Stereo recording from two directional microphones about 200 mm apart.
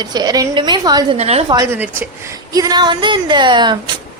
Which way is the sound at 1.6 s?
10° right (ahead or behind).